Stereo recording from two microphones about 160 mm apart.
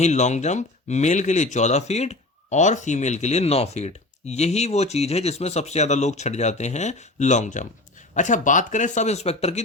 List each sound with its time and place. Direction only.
0.0 s speech: 45° left (ahead or behind)